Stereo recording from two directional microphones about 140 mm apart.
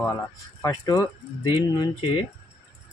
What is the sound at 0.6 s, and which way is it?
Speech, 25° left (ahead or behind).